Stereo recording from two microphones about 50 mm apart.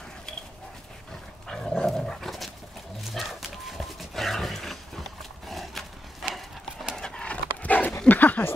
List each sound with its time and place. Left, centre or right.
1.5 s dog: centre
3.0 s horse: centre
4.1 s a sound: centre
6.2 s horse: centre
7.0 s horse: centre
7.6 s dog: left
8.1 s a sound: left